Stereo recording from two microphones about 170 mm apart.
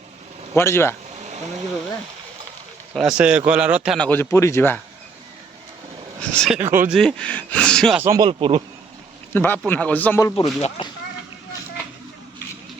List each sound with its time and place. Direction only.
0.5 s speech: 15° left (ahead or behind)
2.9 s speech: 5° right (ahead or behind)
3.9 s speech: 10° left (ahead or behind)
6.3 s speech: 5° left (ahead or behind)
6.6 s speech: 15° right (ahead or behind)
6.9 s speech: 5° left (ahead or behind)
7.9 s speech: 15° right (ahead or behind)
8.2 s speech: 30° right (ahead or behind)
9.3 s speech: 10° left (ahead or behind)
10.6 s speech: 30° left (ahead or behind)